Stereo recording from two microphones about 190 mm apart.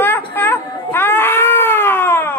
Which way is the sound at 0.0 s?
10° left (ahead or behind).